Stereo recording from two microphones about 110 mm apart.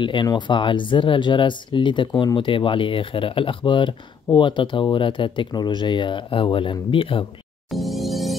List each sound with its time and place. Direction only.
0.0 s speech: 45° left (ahead or behind)
7.7 s music: centre (ahead or behind)